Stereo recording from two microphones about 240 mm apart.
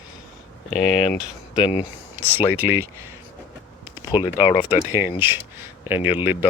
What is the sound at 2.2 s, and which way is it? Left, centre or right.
Speech, centre.